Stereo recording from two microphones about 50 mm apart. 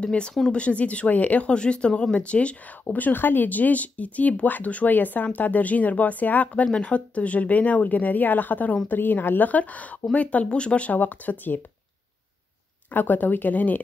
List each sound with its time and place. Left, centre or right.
0.0 s speech: centre
2.8 s speech: left
11.0 s speech: left
12.9 s speech: left